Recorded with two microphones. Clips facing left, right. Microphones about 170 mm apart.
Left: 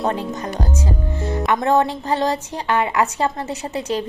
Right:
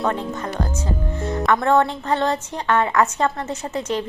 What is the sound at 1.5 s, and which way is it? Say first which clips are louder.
Speech: right 1 dB; 20° left (ahead or behind).